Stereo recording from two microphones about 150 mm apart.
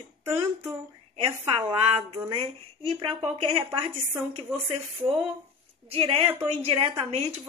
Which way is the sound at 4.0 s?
15° right (ahead or behind).